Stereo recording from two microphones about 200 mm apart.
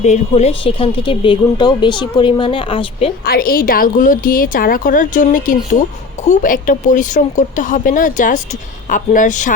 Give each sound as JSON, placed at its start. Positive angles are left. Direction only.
{"t": 0.0, "sound": "speech", "side_deg": 35}
{"t": 3.2, "sound": "a woman's voice", "side_deg": 50}